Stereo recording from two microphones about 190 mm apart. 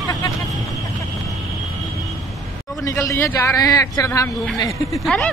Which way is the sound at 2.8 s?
15° left (ahead or behind).